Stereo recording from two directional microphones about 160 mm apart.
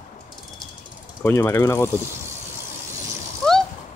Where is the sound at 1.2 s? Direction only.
15° left (ahead or behind).